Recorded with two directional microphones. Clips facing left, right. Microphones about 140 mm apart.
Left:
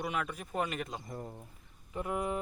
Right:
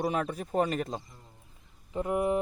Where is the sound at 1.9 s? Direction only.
25° right (ahead or behind).